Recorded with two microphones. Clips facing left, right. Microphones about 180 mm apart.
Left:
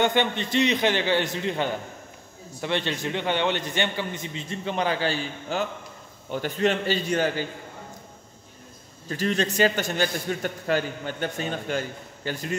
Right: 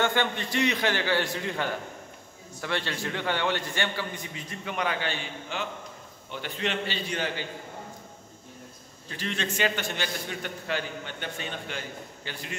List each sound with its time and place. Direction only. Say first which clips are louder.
0.0 s a man's voice: left 4 dB; 20° left (ahead or behind); by 7.4 s 45° left (ahead or behind)
9.1 s a man's voice: left 7 dB; 40° left (ahead or behind)